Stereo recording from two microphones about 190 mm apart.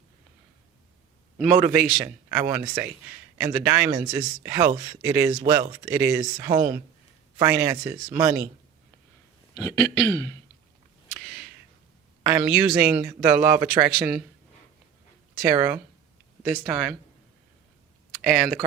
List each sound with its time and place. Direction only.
1.4 s a man's voice: 10° right (ahead or behind)
6.3 s a man's voice: 20° right (ahead or behind)
9.6 s speech: 15° left (ahead or behind)
11.2 s a sound: centre (ahead or behind)
12.3 s a man's voice: 10° right (ahead or behind)
15.5 s a man's voice: 10° right (ahead or behind)
18.2 s speech: centre (ahead or behind)